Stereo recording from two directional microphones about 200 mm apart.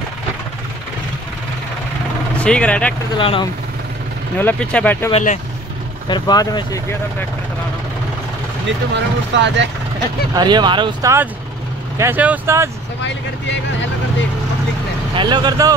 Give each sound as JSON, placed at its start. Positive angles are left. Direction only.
{"t": 2.4, "sound": "speech", "side_deg": 5}
{"t": 3.2, "sound": "speech", "side_deg": 25}
{"t": 4.4, "sound": "speech", "side_deg": 5}
{"t": 5.1, "sound": "speech", "side_deg": 35}
{"t": 6.0, "sound": "speech", "side_deg": 20}
{"t": 8.9, "sound": "speech", "side_deg": -60}
{"t": 10.3, "sound": "speech", "side_deg": -20}
{"t": 15.1, "sound": "speech", "side_deg": -20}